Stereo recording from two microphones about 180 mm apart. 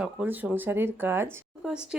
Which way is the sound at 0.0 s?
10° right (ahead or behind).